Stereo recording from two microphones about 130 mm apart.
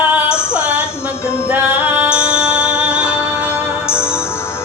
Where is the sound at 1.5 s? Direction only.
15° right (ahead or behind).